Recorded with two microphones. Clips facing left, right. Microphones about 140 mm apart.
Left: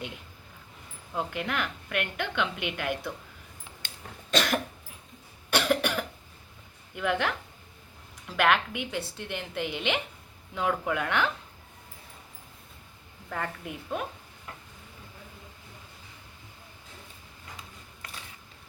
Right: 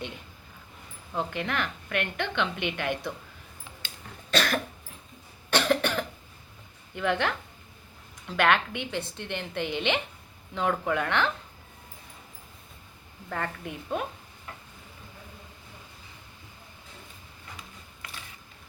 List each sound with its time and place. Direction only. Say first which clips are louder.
1.1 s a woman's voice: right 1 dB; 5° left (ahead or behind)
4.3 s cough: even; 15° left (ahead or behind)
6.9 s a woman's voice: right 1 dB; 5° left (ahead or behind)
13.3 s a woman's voice: right 1 dB; 5° left (ahead or behind)